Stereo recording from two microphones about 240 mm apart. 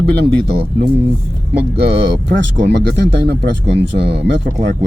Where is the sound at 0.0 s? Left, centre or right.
Right.